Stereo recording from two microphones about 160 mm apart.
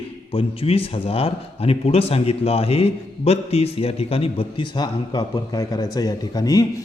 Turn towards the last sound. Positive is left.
turn(degrees=25)  # may be behind; listen again after turning